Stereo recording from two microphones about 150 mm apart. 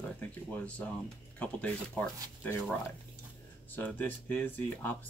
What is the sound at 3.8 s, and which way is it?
Speech, 10° left (ahead or behind).